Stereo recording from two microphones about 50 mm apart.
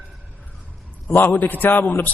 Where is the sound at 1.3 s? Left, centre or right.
Left.